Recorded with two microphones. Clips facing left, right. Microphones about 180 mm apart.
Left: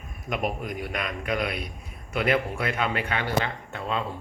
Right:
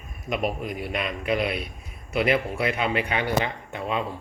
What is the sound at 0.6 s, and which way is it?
Speech, 45° left (ahead or behind).